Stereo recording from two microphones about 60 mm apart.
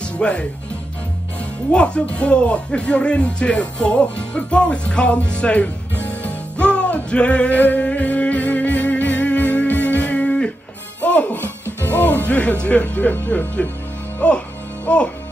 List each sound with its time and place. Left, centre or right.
0.2 s speech: centre
1.7 s a sound: centre
11.0 s music: left